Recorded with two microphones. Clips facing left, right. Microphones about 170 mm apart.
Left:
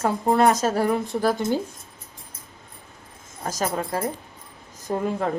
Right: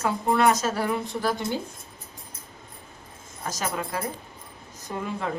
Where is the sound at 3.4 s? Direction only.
40° left (ahead or behind).